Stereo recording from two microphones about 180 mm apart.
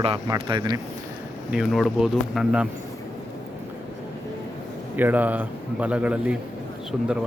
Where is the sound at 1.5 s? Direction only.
Centre (ahead or behind).